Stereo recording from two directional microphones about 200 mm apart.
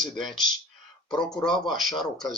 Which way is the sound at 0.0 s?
Centre (ahead or behind).